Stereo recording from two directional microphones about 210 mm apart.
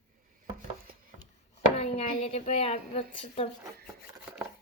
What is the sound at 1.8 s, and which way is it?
Speech, 30° left (ahead or behind).